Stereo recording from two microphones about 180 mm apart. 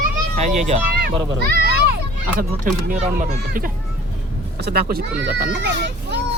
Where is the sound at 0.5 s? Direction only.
40° right (ahead or behind).